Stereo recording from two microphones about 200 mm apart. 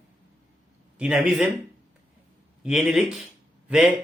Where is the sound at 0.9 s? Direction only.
5° right (ahead or behind).